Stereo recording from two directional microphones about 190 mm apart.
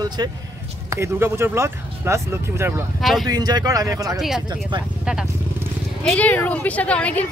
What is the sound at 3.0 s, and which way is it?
Speech, centre (ahead or behind).